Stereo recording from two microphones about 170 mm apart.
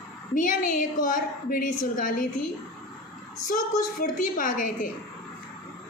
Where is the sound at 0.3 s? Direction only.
50° left (ahead or behind).